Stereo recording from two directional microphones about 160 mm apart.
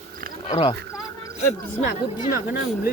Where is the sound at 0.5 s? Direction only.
30° left (ahead or behind).